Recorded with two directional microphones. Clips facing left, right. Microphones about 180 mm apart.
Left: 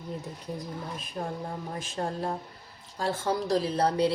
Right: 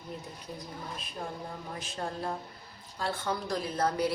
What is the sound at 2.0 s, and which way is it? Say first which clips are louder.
A woman's voice: left 4 dB; 40° left (ahead or behind).